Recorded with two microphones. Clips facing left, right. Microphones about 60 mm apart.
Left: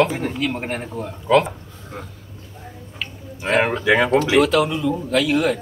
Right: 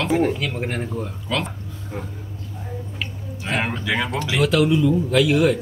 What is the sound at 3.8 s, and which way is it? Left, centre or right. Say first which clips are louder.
Speech: left 7 dB; left.